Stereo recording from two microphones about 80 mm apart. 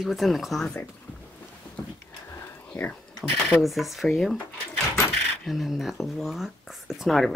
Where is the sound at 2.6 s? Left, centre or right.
Left.